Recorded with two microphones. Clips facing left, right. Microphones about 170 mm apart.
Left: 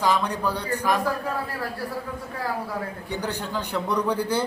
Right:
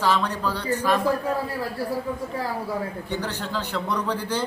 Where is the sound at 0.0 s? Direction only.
10° left (ahead or behind).